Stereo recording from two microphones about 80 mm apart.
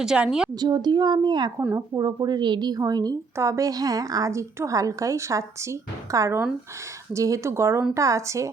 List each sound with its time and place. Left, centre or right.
0.0 s a woman's voice: centre
0.6 s a woman's voice: right
1.7 s a woman's voice: right
3.3 s a woman's voice: right